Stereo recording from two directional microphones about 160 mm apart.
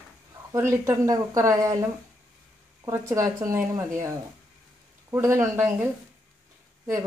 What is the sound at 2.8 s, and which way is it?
A woman's voice, 15° right (ahead or behind).